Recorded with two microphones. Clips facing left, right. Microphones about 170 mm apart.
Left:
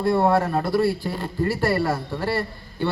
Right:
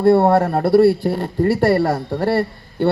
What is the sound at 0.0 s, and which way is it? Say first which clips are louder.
Speech: right 6 dB; 60° right (ahead or behind).